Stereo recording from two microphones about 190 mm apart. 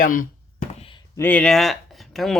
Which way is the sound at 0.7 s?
30° left (ahead or behind).